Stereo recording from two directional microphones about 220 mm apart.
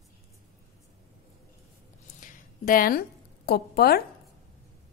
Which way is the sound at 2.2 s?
40° left (ahead or behind).